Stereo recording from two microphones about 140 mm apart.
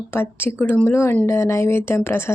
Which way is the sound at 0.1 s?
15° left (ahead or behind).